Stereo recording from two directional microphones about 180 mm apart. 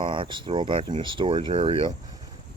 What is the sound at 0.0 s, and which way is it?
Speech, 25° right (ahead or behind).